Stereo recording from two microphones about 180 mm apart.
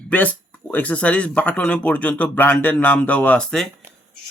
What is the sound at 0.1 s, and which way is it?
Speech, 10° left (ahead or behind).